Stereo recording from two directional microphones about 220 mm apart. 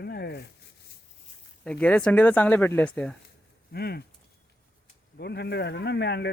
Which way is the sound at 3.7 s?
45° left (ahead or behind).